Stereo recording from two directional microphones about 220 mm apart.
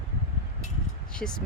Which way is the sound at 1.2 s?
5° left (ahead or behind).